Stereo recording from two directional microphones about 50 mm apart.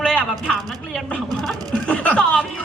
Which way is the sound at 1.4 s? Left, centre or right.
Centre.